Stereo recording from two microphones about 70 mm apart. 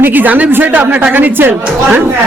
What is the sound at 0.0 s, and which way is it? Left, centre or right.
A woman's voice, right.